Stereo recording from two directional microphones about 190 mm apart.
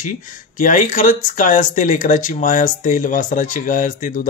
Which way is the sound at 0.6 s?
45° left (ahead or behind).